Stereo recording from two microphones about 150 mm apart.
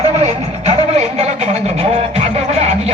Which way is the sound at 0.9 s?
45° right (ahead or behind).